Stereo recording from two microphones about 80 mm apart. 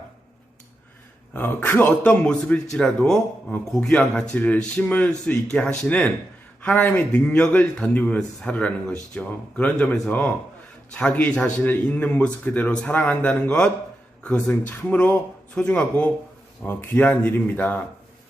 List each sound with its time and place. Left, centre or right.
1.3 s a man's voice: left